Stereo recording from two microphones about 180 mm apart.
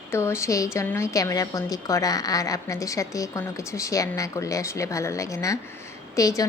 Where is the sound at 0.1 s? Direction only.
15° left (ahead or behind).